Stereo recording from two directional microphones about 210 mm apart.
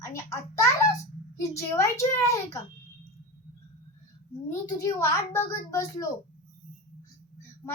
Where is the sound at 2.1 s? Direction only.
15° left (ahead or behind).